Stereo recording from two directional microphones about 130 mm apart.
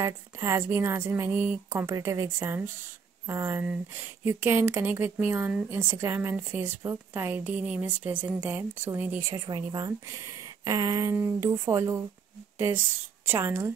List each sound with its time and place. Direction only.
0.0 s a woman's voice: 20° right (ahead or behind)
9.3 s a woman's voice: 30° right (ahead or behind)